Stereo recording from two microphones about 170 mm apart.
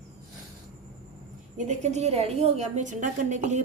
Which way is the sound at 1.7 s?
40° right (ahead or behind).